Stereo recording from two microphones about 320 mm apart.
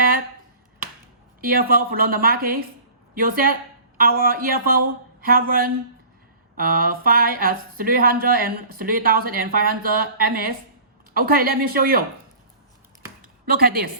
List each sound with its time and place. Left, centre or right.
1.4 s speech: right
13.5 s speech: right